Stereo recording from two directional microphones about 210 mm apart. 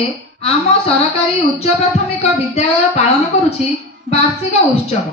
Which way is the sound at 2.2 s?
30° left (ahead or behind).